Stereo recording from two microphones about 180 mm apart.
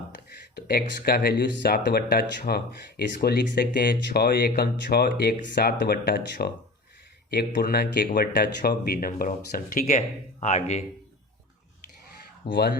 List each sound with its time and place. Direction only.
0.3 s speech: 60° left (ahead or behind)
10.4 s speech: 40° left (ahead or behind)
12.5 s speech: 65° left (ahead or behind)